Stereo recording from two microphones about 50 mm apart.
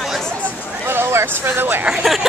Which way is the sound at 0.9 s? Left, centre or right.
Right.